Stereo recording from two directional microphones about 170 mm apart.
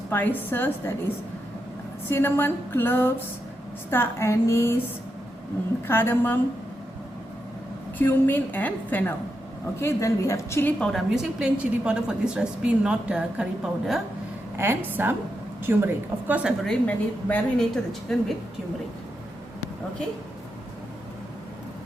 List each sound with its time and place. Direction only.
0.1 s a woman's voice: 10° left (ahead or behind)
2.0 s a woman's voice: 15° left (ahead or behind)
5.9 s a woman's voice: 15° left (ahead or behind)
7.9 s a woman's voice: 10° left (ahead or behind)
10.9 s a woman's voice: 5° right (ahead or behind)
14.5 s a woman's voice: 15° right (ahead or behind)
16.8 s a woman's voice: 10° left (ahead or behind)